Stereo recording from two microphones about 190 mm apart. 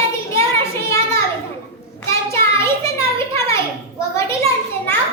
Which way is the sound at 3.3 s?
15° left (ahead or behind).